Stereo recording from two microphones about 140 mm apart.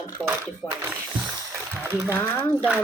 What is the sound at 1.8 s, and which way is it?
Speech, 15° right (ahead or behind).